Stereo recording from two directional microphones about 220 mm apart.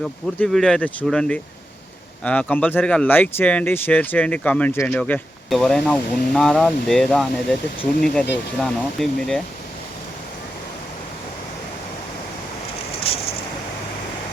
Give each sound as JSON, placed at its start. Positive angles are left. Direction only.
{"t": 0.0, "sound": "speech", "side_deg": 0}
{"t": 13.1, "sound": "vehicle", "side_deg": 25}